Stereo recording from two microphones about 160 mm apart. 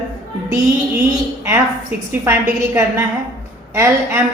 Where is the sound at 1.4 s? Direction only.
15° right (ahead or behind).